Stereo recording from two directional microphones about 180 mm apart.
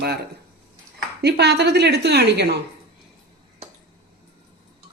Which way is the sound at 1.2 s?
65° right (ahead or behind).